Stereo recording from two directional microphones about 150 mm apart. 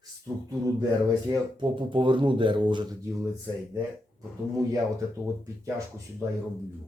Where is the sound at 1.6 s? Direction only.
35° right (ahead or behind).